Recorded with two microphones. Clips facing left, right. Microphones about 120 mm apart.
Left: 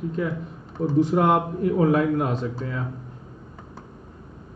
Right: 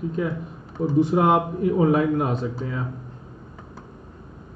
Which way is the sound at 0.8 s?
5° right (ahead or behind).